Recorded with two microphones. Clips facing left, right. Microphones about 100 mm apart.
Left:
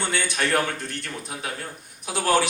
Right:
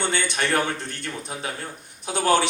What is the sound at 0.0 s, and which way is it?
A man's voice, 20° right (ahead or behind).